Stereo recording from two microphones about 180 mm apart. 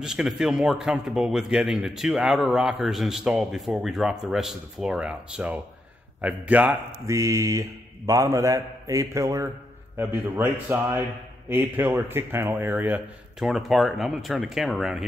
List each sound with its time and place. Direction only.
0.0 s a man's voice: 5° right (ahead or behind)